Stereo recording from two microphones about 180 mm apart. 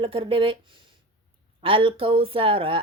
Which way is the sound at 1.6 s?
30° right (ahead or behind).